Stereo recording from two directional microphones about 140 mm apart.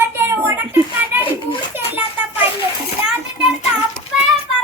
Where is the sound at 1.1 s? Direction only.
15° right (ahead or behind).